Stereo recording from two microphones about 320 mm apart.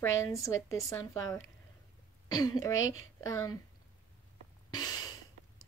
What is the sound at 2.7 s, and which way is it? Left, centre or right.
Speech, left.